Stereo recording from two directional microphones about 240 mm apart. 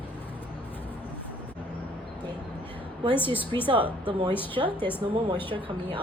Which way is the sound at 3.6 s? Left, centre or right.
Right.